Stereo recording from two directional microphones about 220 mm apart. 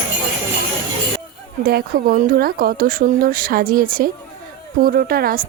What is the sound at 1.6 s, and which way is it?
A woman's voice, 45° right (ahead or behind).